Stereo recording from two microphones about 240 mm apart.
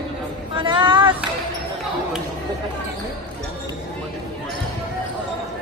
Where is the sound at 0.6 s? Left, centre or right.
Centre.